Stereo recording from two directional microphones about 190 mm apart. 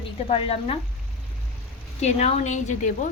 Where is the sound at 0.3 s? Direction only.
30° left (ahead or behind).